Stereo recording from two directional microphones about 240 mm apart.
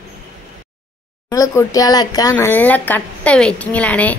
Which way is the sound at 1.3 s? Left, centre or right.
Centre.